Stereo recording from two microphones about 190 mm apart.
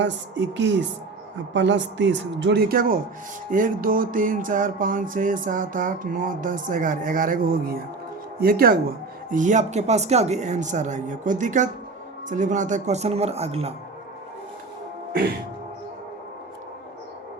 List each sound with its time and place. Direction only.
0.0 s speech: 70° right (ahead or behind); by 3.0 s 50° right (ahead or behind)
3.5 s a sound: 45° right (ahead or behind)
9.3 s speech: 40° right (ahead or behind)